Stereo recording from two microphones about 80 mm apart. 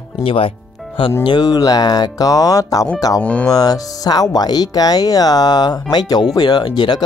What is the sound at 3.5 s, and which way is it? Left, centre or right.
Speech, left.